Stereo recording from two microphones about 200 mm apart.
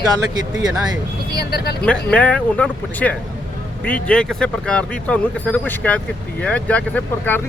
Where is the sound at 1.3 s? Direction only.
50° left (ahead or behind).